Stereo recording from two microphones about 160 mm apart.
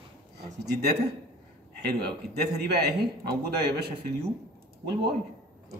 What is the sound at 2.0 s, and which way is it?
A man's voice, 90° right.